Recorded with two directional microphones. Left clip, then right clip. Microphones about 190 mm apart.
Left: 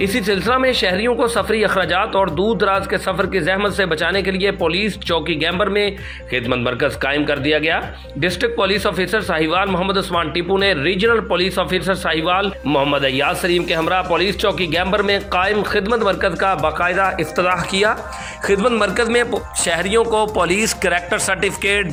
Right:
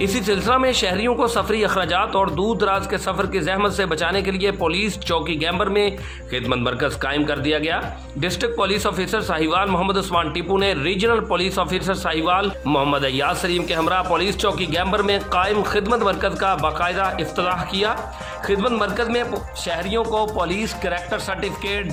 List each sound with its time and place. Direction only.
0.0 s a man's voice: 5° left (ahead or behind)
18.4 s speech: 10° left (ahead or behind)